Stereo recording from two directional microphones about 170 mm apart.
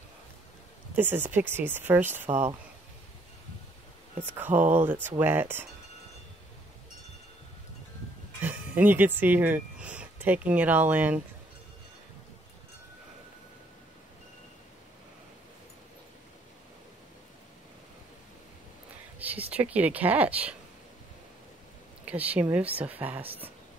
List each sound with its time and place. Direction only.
0.9 s speech: 10° right (ahead or behind)
4.2 s speech: 10° right (ahead or behind)
8.4 s speech: 10° right (ahead or behind)
19.1 s speech: 10° right (ahead or behind)
22.0 s speech: 10° right (ahead or behind)
23.2 s speech: 35° right (ahead or behind)